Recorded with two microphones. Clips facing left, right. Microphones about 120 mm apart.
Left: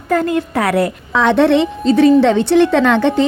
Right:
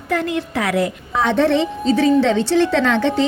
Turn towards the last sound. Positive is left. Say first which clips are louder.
# left 4 dB
turn(degrees=55)  # may be behind; listen again after turning